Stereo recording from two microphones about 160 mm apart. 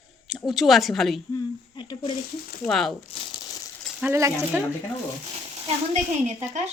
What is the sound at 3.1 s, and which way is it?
Crumpling, 25° left (ahead or behind).